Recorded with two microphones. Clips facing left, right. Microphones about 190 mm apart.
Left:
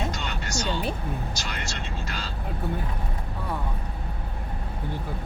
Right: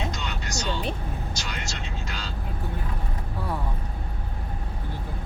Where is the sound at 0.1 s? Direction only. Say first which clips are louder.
Left 1 dB; 50° left (ahead or behind).